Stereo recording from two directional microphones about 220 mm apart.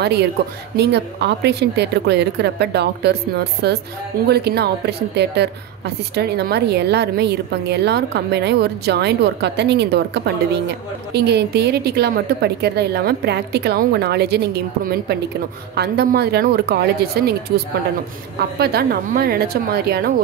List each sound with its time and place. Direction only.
0.7 s a woman's voice: 50° right (ahead or behind)
18.6 s a woman's voice: 45° right (ahead or behind)